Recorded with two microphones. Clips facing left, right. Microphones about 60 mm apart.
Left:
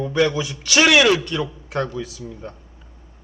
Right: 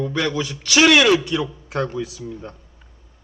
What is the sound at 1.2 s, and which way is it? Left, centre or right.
Speech, centre.